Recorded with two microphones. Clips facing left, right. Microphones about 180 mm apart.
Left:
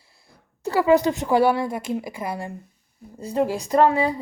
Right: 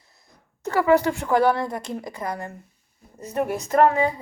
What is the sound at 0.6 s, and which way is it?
A woman's voice, 15° left (ahead or behind).